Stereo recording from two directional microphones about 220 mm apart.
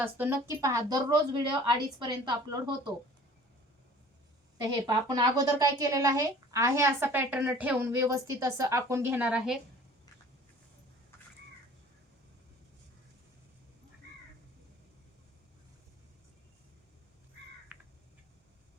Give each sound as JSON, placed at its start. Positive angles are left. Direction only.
{"t": 0.0, "sound": "speech", "side_deg": -10}
{"t": 4.9, "sound": "speech", "side_deg": -20}
{"t": 17.7, "sound": "crow", "side_deg": -5}